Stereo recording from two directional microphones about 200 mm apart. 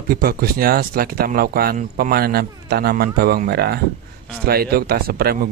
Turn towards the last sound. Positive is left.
turn(degrees=-50)  # may be behind; listen again after turning